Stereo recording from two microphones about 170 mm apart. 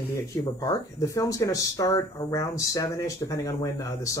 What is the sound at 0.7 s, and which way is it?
Speech, 20° left (ahead or behind).